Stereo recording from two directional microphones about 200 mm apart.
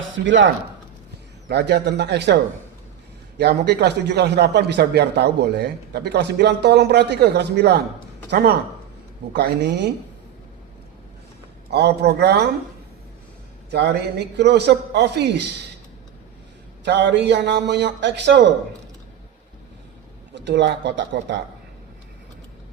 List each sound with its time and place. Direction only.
0.0 s a man's voice: 65° right (ahead or behind)
11.7 s a man's voice: 55° right (ahead or behind)
13.7 s a man's voice: 55° right (ahead or behind)
16.8 s a man's voice: 60° right (ahead or behind)
20.3 s a man's voice: 60° right (ahead or behind)